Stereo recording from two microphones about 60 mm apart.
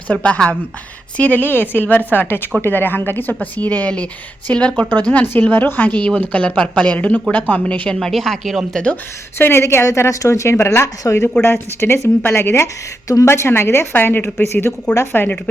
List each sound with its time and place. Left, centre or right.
0.1 s a woman's voice: left
7.9 s speech: centre
9.4 s speech: left
9.8 s speech: left
11.1 s speech: left
11.4 s a woman's voice: left